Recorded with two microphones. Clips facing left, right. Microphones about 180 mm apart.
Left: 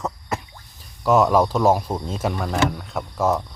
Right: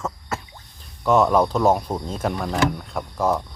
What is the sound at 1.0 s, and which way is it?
Speech, centre (ahead or behind).